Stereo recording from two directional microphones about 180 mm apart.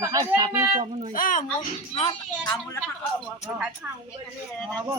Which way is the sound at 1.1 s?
50° left (ahead or behind).